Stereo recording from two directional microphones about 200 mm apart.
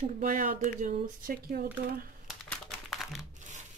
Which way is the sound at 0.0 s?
40° right (ahead or behind).